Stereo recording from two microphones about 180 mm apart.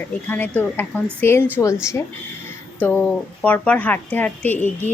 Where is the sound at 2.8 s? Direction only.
10° left (ahead or behind).